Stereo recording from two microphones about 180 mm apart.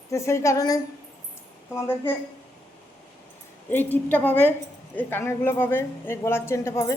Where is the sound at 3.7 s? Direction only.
10° left (ahead or behind).